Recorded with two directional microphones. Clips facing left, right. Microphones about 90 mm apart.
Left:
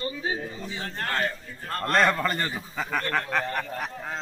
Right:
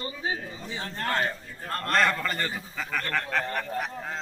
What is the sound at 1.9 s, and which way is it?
A man's voice, 10° left (ahead or behind).